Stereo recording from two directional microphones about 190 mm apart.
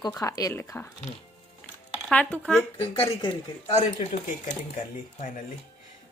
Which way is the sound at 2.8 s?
30° left (ahead or behind).